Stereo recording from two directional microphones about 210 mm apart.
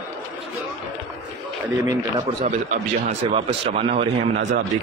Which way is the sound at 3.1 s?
25° right (ahead or behind).